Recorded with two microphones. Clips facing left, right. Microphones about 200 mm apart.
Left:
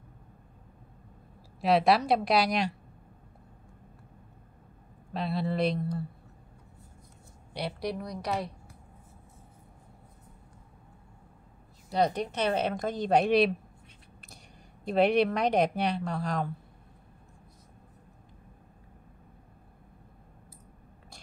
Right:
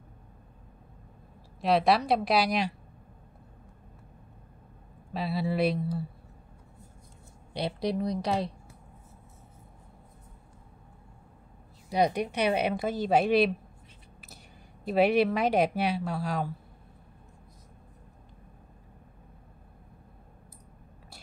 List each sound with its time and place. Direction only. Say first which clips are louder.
1.6 s speech: even; centre (ahead or behind)
5.1 s speech: right 1 dB; 5° right (ahead or behind)
7.5 s a woman's voice: right 4 dB; 25° right (ahead or behind)
11.9 s a woman's voice: right 1 dB; 10° right (ahead or behind)
14.9 s speech: right 1 dB; 5° right (ahead or behind)